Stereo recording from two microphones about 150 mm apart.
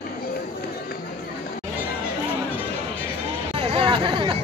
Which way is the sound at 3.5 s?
40° right (ahead or behind).